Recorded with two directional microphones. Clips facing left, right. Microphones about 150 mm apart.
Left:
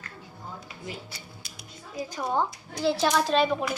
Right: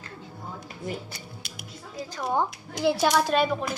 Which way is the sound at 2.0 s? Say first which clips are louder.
Left 2 dB; 15° left (ahead or behind).